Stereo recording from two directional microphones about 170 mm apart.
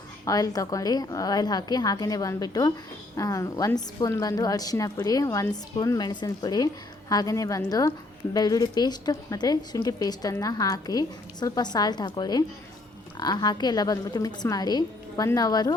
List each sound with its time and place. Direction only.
0.3 s a woman's voice: 20° left (ahead or behind)